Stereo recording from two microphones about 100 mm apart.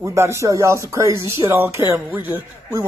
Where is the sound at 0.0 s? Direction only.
30° right (ahead or behind).